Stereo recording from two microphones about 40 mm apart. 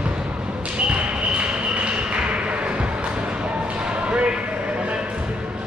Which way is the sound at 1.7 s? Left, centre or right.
Right.